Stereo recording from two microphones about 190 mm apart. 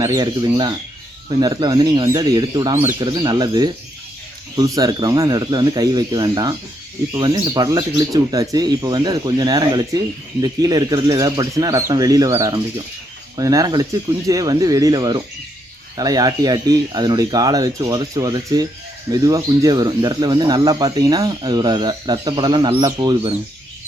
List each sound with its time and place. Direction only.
0.0 s speech: 20° right (ahead or behind)